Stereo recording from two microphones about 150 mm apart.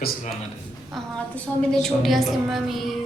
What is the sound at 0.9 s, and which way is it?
A woman's voice, 5° left (ahead or behind).